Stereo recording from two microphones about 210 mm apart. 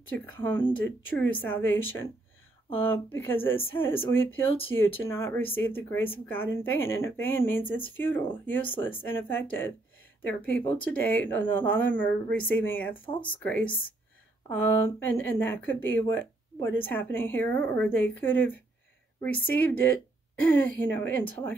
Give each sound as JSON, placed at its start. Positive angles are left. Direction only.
{"t": 0.1, "sound": "speech", "side_deg": 10}
{"t": 1.8, "sound": "speech", "side_deg": 10}
{"t": 12.9, "sound": "speech", "side_deg": 25}
{"t": 13.4, "sound": "speech", "side_deg": 5}